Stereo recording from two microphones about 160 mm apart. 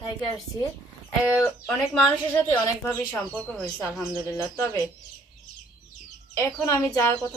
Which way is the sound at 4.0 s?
15° left (ahead or behind).